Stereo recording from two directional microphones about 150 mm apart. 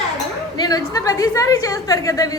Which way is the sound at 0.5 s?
25° left (ahead or behind).